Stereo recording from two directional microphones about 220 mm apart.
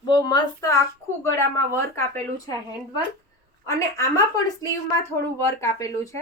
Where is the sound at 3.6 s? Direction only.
15° left (ahead or behind).